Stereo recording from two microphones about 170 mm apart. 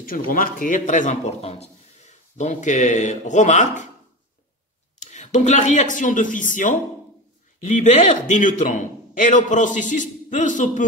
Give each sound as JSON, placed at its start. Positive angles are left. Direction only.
{"t": 0.0, "sound": "a man's voice", "side_deg": 55}
{"t": 5.0, "sound": "a man's voice", "side_deg": 45}